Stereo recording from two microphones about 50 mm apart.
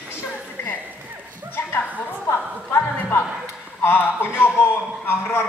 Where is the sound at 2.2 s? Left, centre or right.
Left.